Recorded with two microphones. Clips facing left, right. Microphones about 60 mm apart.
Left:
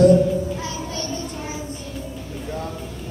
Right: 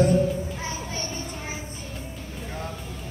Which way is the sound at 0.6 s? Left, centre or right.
Right.